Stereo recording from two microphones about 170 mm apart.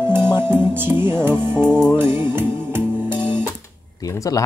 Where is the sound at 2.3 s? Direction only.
15° right (ahead or behind).